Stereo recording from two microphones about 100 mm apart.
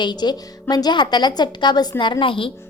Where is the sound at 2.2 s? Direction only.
60° left (ahead or behind).